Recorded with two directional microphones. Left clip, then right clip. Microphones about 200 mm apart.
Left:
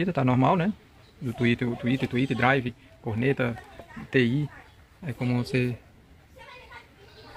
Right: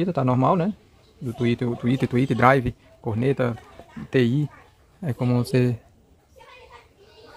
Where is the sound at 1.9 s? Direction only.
25° right (ahead or behind).